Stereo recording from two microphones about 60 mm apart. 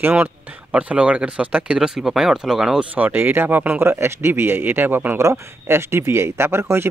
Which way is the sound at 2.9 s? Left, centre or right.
Right.